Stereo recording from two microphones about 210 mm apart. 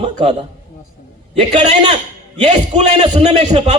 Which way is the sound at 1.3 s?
35° right (ahead or behind).